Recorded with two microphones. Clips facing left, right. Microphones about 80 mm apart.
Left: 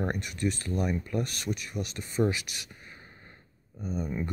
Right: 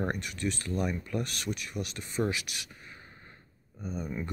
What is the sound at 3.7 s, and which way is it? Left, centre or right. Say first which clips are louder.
Speech: left 3 dB; centre.